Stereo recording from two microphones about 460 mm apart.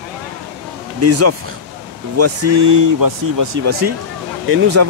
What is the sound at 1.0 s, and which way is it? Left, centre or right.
Speech, right.